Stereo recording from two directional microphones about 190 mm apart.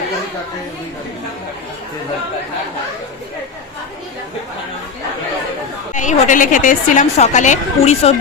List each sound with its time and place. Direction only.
5.9 s a woman's voice: 40° left (ahead or behind)